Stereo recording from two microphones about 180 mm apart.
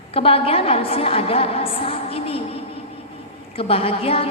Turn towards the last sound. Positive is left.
turn(degrees=30)  # may be behind; listen again after turning